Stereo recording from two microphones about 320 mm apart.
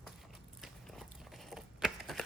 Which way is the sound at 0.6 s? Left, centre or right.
Centre.